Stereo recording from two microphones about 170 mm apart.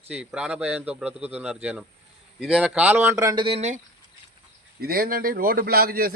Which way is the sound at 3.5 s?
40° right (ahead or behind).